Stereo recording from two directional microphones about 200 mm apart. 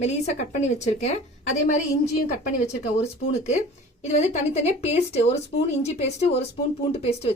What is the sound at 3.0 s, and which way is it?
A woman's voice, 30° left (ahead or behind).